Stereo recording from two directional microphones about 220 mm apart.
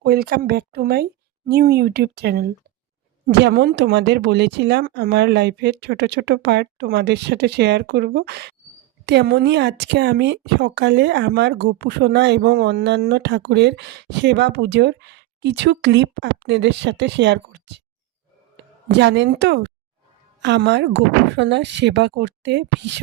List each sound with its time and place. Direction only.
0.0 s speech: 45° right (ahead or behind)
18.9 s speech: 55° right (ahead or behind)